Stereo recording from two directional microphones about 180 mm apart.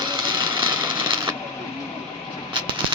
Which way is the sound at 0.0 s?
25° right (ahead or behind).